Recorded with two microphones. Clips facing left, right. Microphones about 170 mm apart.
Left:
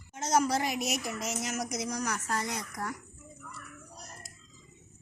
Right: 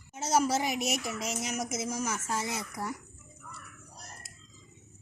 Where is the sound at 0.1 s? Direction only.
10° right (ahead or behind).